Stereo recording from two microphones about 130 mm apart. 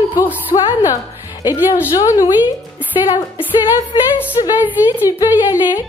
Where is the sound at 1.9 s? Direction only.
25° left (ahead or behind).